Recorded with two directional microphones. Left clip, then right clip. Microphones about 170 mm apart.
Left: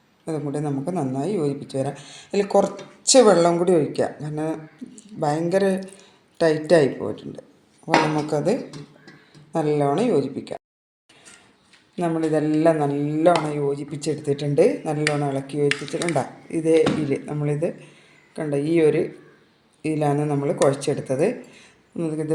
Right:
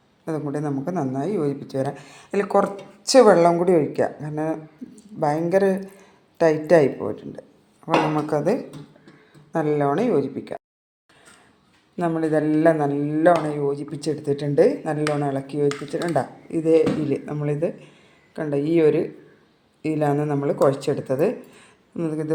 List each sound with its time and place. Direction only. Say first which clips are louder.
0.3 s a woman's voice: even; centre (ahead or behind)
8.1 s speech: right 1 dB; 10° right (ahead or behind)
9.5 s speech: even; centre (ahead or behind)
11.9 s speech: even; centre (ahead or behind)
15.7 s speech: left 2 dB; 15° right (ahead or behind)
16.1 s speech: right 1 dB; 5° left (ahead or behind)